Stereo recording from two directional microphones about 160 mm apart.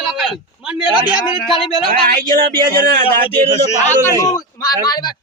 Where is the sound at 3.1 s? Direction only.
15° left (ahead or behind).